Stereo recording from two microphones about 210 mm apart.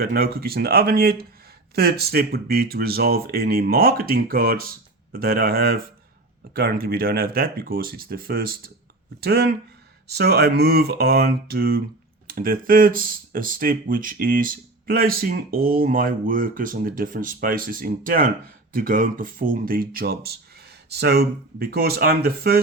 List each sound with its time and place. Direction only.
0.0 s speech: 45° right (ahead or behind)